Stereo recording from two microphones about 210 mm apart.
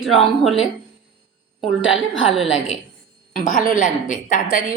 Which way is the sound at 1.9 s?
Centre (ahead or behind).